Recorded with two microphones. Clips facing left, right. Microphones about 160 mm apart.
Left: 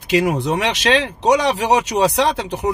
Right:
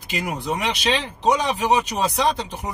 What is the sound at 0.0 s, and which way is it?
Speech, 80° left.